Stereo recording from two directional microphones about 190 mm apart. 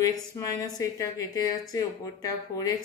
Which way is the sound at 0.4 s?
20° left (ahead or behind).